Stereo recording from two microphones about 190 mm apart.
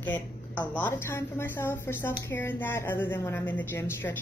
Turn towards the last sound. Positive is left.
turn(degrees=10)  # may be behind; listen again after turning